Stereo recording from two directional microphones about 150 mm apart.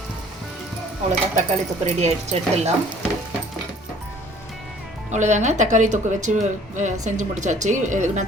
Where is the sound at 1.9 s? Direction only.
45° right (ahead or behind).